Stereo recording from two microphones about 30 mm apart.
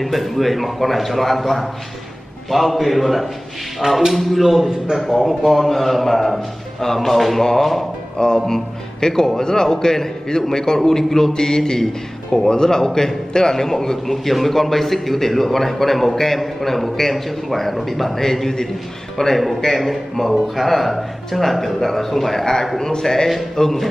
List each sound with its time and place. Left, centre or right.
0.0 s speech: centre
4.4 s a man's voice: centre
4.6 s a man's voice: right
5.0 s a man's voice: centre
8.5 s a man's voice: centre
14.0 s a man's voice: centre